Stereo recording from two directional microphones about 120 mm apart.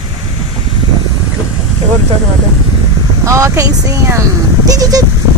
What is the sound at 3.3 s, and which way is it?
Speech, 25° right (ahead or behind).